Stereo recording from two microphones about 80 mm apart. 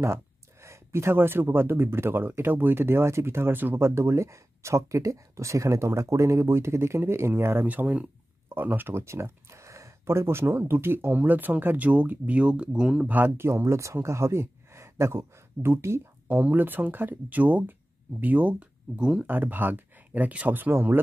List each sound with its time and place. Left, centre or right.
0.0 s speech: right
7.6 s speech: centre
13.0 s speech: right
19.2 s speech: right